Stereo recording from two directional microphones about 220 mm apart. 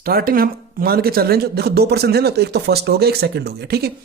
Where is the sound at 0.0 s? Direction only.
40° right (ahead or behind).